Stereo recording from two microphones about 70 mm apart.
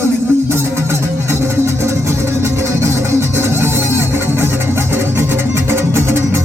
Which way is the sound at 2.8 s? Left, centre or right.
Right.